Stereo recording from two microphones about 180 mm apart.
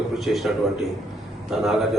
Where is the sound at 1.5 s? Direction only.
Centre (ahead or behind).